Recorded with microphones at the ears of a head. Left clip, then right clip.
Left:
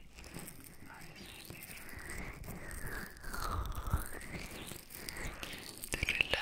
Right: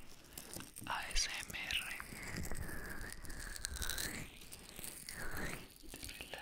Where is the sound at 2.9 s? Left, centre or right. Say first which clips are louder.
Left 5 dB; left.